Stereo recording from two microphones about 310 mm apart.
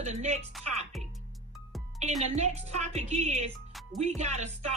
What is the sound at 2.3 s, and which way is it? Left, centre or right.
Speech, right.